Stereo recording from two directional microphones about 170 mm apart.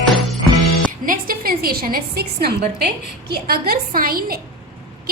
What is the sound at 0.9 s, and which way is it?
Music, 55° right (ahead or behind).